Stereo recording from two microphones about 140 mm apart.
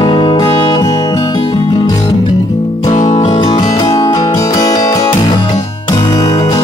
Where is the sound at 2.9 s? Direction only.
55° left (ahead or behind).